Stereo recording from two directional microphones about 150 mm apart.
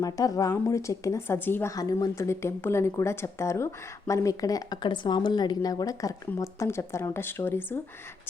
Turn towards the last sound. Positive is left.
turn(degrees=15)  # may be behind; listen again after turning